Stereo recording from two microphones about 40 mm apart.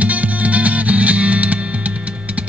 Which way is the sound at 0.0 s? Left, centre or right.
Right.